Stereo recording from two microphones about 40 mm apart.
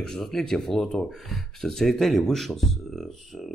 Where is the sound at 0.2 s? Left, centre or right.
Centre.